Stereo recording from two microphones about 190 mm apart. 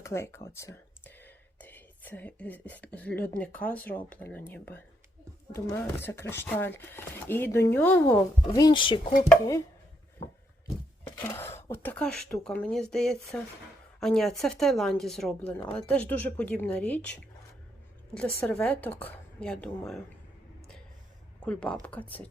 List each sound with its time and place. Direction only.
0.0 s speech: 15° left (ahead or behind)
8.5 s speech: 20° left (ahead or behind)
11.0 s speech: 15° left (ahead or behind)
18.1 s speech: 5° left (ahead or behind)
21.4 s speech: 5° left (ahead or behind)